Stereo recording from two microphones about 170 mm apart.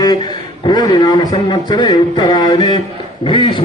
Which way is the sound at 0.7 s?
25° left (ahead or behind).